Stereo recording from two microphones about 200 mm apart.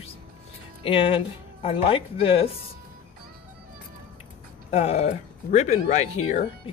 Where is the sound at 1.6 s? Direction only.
30° left (ahead or behind).